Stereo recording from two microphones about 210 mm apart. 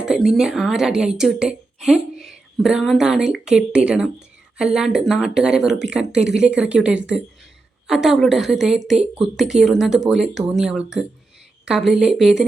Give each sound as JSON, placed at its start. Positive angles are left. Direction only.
{"t": 0.0, "sound": "a woman's voice", "side_deg": 0}